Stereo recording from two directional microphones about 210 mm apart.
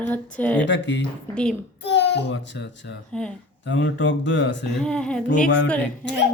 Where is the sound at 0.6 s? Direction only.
60° left (ahead or behind).